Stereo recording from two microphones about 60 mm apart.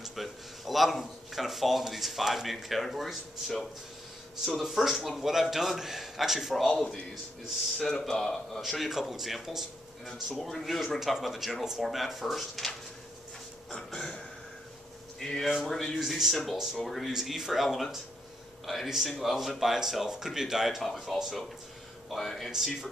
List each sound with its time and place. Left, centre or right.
0.0 s speech: centre
4.6 s a man's voice: centre
6.7 s a man's voice: centre
13.7 s a sound: centre
15.1 s a man's voice: centre